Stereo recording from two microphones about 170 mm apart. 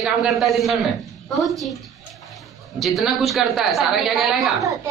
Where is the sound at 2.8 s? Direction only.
Centre (ahead or behind).